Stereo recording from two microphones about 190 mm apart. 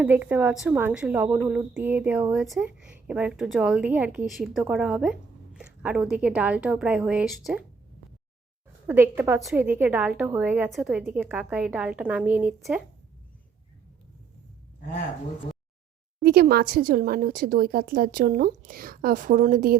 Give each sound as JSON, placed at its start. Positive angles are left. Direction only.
{"t": 0.0, "sound": "a woman's voice", "side_deg": -10}
{"t": 8.9, "sound": "a woman's voice", "side_deg": -10}
{"t": 16.2, "sound": "a woman's voice", "side_deg": -55}